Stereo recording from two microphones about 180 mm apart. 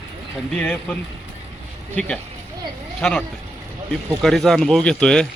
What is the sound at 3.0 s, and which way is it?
Speech, 5° left (ahead or behind).